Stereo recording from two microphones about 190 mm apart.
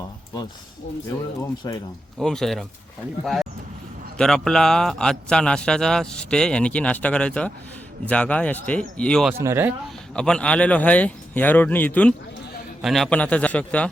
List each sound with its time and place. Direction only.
1.6 s speech: 15° left (ahead or behind)
2.1 s a man's voice: centre (ahead or behind)
4.2 s a man's voice: 5° left (ahead or behind)
9.4 s speech: 15° right (ahead or behind)
10.2 s speech: 5° left (ahead or behind)